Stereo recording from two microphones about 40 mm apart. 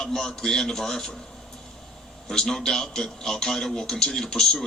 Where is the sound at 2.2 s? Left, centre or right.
Centre.